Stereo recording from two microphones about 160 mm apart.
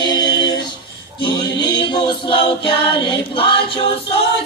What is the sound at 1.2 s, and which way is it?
Choir, 25° left (ahead or behind).